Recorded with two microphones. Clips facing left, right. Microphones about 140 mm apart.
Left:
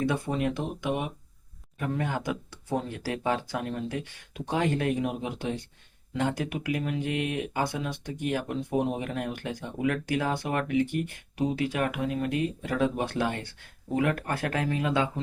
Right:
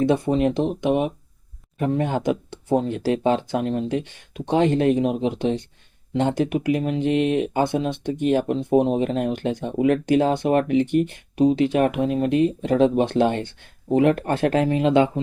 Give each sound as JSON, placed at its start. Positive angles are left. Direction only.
{"t": 0.0, "sound": "speech", "side_deg": -25}